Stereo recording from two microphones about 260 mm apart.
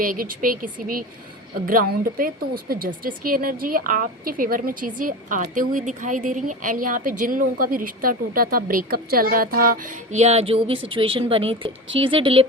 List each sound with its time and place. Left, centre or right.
0.0 s a woman's voice: right